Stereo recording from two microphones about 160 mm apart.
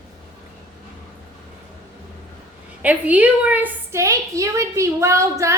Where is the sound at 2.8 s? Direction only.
10° right (ahead or behind).